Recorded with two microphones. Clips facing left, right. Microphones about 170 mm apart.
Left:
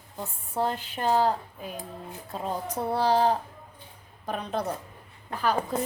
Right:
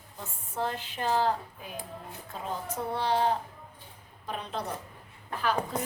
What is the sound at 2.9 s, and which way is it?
Speech, 40° left (ahead or behind).